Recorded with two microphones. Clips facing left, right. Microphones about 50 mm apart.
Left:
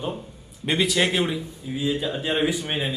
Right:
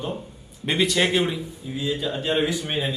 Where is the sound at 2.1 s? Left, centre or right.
Centre.